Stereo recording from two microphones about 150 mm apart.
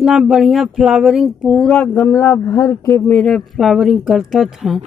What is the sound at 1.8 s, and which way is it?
Speech, 15° left (ahead or behind).